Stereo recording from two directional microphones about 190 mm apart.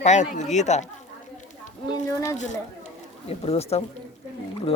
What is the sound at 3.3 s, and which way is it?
Speech, 30° left (ahead or behind).